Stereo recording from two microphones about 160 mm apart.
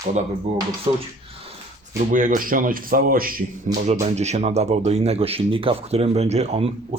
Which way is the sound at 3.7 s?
50° right (ahead or behind).